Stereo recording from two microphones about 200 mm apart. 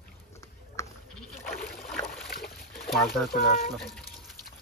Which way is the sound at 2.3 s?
50° left (ahead or behind).